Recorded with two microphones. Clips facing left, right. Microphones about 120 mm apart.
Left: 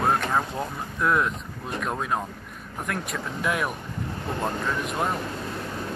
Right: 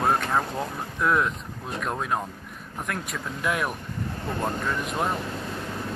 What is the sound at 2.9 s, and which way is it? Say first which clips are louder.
Speech: left 2 dB; centre (ahead or behind).